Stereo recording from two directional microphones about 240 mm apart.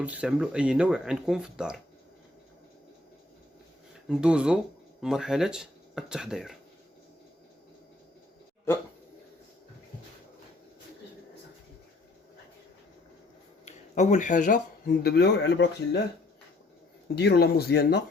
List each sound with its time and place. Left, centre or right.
0.0 s speech: centre
4.1 s speech: centre
8.7 s speech: centre
13.7 s speech: left
17.2 s speech: left